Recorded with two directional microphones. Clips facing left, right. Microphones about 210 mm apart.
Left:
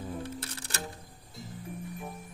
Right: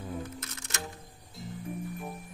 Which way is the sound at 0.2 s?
30° left (ahead or behind).